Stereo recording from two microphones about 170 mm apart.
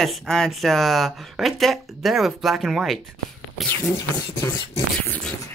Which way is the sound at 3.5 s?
10° left (ahead or behind).